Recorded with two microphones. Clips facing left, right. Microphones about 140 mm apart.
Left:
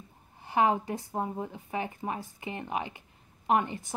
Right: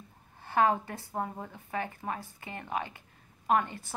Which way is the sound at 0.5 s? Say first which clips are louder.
Left 1 dB; 15° left (ahead or behind).